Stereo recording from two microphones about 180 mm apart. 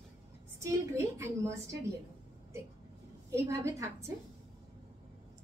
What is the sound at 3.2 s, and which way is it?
Speech, 15° right (ahead or behind).